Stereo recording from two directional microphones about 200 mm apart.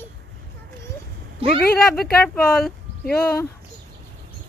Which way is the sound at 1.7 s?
5° left (ahead or behind).